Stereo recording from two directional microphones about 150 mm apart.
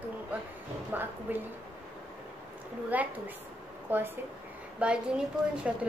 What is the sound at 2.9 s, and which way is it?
A woman's voice, 10° right (ahead or behind).